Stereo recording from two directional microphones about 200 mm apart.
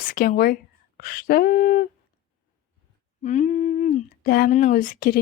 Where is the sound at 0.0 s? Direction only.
45° left (ahead or behind).